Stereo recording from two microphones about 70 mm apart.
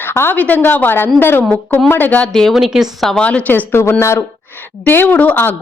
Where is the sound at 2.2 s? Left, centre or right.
Centre.